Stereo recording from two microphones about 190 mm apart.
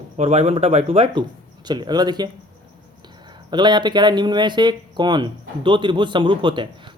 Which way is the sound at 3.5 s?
25° right (ahead or behind).